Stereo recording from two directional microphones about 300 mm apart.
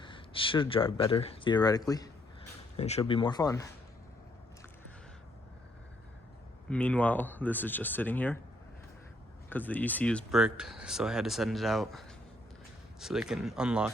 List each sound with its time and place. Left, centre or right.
0.0 s speech: centre
6.7 s speech: centre
9.5 s speech: centre